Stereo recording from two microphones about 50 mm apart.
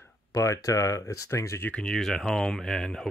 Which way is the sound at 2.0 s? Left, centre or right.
Centre.